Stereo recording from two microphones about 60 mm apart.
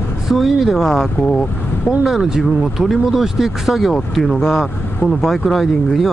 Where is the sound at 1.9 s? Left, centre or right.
Centre.